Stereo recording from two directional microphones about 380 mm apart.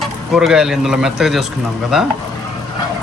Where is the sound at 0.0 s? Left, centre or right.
Centre.